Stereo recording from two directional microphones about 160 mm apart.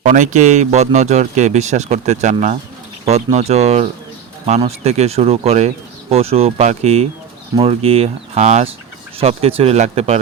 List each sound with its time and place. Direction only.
0.0 s speech: 50° right (ahead or behind)